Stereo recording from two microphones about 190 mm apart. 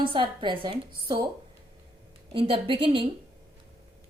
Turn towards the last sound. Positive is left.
turn(degrees=-25)  # may be behind; listen again after turning